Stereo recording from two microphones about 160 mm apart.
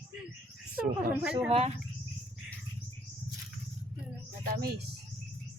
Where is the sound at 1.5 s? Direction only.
40° right (ahead or behind).